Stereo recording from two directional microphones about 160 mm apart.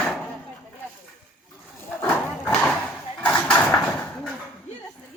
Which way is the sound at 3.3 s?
10° left (ahead or behind).